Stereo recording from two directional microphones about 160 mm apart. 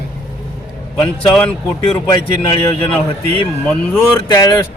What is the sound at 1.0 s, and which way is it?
Speech, 10° left (ahead or behind).